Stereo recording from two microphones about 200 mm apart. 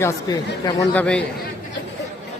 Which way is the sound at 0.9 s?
5° left (ahead or behind).